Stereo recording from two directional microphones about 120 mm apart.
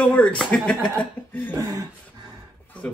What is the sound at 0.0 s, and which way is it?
Speech, 10° left (ahead or behind).